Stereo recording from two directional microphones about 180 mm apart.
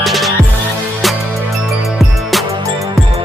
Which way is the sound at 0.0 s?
Centre (ahead or behind).